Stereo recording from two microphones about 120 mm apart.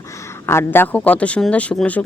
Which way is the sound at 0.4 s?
20° left (ahead or behind).